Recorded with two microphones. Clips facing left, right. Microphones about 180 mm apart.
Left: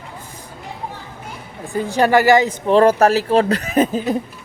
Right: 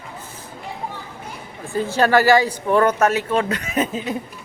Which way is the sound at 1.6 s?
15° left (ahead or behind).